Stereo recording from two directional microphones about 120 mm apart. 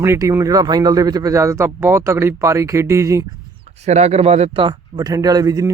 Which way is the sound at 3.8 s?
70° right (ahead or behind).